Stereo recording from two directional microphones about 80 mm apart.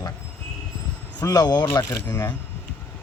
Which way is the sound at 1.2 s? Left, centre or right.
Left.